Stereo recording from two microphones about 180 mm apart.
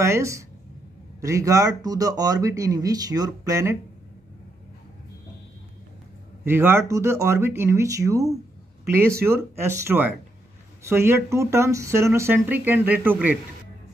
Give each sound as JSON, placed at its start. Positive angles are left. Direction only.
{"t": 0.0, "sound": "a woman's voice", "side_deg": -15}
{"t": 6.4, "sound": "speech", "side_deg": -15}